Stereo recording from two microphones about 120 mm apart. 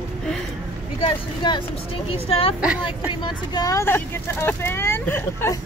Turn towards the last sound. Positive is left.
turn(degrees=20)  # may be behind; listen again after turning